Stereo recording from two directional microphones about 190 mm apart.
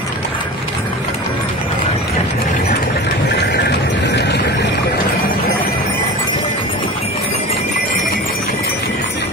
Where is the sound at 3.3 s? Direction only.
60° left (ahead or behind).